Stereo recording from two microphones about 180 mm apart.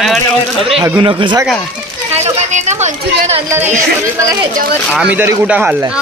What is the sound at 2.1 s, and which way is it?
Speech, 40° right (ahead or behind).